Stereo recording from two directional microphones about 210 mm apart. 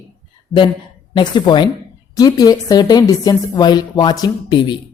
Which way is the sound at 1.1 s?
20° left (ahead or behind).